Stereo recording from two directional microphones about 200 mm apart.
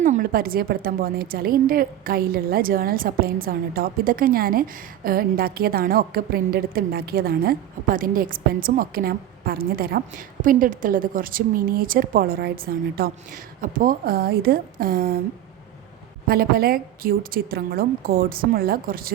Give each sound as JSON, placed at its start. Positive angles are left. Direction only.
{"t": 0.0, "sound": "a woman's voice", "side_deg": -45}
{"t": 16.2, "sound": "a woman's voice", "side_deg": -50}